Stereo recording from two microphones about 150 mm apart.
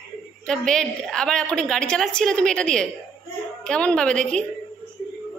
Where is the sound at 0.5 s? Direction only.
5° left (ahead or behind).